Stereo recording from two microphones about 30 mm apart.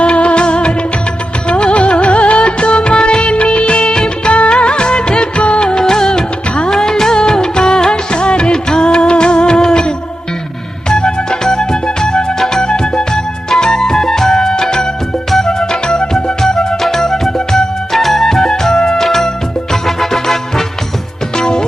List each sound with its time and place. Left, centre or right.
0.0 s music: left
4.3 s music of bollywood: left
5.8 s music of bollywood: centre
10.8 s music: left
17.9 s music: centre
21.3 s music: left